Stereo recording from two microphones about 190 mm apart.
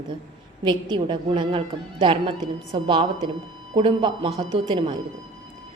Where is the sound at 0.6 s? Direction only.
25° right (ahead or behind).